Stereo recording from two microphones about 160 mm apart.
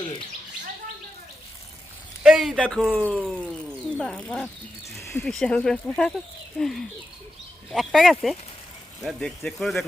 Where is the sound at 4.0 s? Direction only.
5° left (ahead or behind).